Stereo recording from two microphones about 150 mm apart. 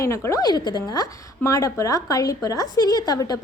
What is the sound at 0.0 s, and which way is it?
A woman's voice, 20° left (ahead or behind).